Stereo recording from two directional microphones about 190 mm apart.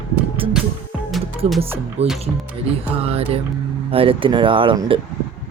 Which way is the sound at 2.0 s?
35° right (ahead or behind).